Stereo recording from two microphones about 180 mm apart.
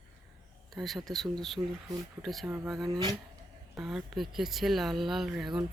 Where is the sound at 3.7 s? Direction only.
5° right (ahead or behind).